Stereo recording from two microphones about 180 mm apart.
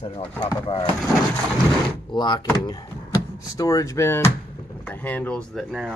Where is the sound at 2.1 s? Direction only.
25° left (ahead or behind).